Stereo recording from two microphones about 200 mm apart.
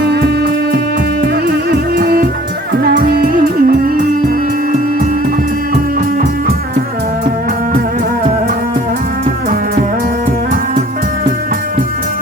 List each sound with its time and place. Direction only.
0.0 s music: 55° right (ahead or behind)